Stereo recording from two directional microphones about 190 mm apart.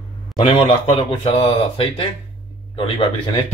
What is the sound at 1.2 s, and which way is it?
Speech, 30° left (ahead or behind).